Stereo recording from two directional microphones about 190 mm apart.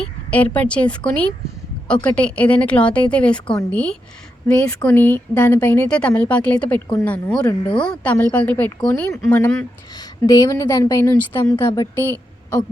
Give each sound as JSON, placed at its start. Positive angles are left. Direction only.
{"t": 0.3, "sound": "speech", "side_deg": 10}